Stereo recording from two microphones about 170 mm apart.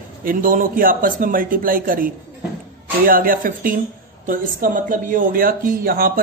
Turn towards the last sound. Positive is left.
turn(degrees=-60)  # may be behind; listen again after turning